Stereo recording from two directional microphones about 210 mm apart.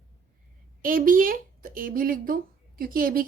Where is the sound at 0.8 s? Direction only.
40° right (ahead or behind).